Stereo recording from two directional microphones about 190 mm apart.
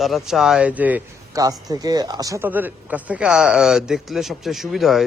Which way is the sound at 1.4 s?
20° right (ahead or behind).